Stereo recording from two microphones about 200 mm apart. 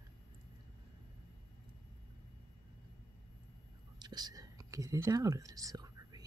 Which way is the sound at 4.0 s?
20° right (ahead or behind).